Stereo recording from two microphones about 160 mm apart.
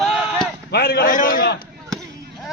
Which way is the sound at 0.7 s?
90° left.